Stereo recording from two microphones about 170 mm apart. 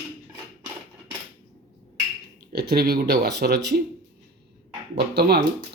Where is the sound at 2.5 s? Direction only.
65° right (ahead or behind).